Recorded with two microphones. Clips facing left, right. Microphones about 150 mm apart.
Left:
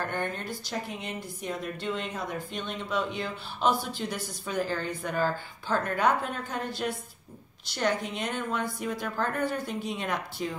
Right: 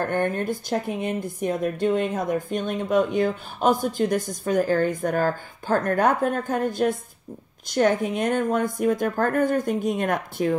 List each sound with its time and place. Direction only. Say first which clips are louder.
0.0 s speech: right 8 dB; 50° right (ahead or behind)